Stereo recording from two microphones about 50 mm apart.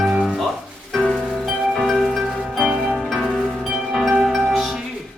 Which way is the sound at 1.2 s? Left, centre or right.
Centre.